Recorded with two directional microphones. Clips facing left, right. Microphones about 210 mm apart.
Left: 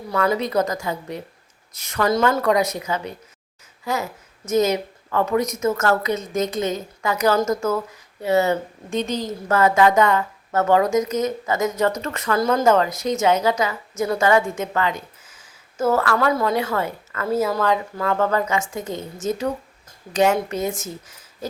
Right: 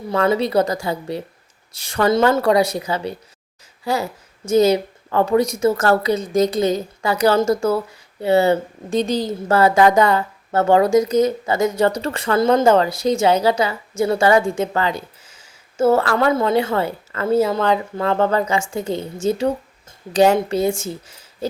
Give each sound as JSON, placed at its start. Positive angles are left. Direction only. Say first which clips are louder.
{"t": 0.1, "sound": "a woman's voice", "louder": "right 3 dB", "side_deg": -25}